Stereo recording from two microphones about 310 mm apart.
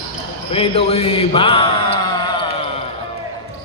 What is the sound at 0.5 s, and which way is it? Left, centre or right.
Speech, centre.